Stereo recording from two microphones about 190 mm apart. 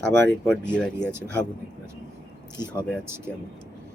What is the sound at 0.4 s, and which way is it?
Speech, 5° left (ahead or behind).